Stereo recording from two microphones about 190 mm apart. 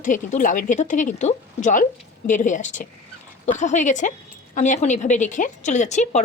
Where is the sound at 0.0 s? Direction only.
40° left (ahead or behind).